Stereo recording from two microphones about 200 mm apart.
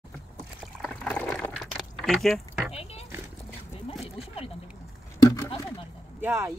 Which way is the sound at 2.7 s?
30° left (ahead or behind).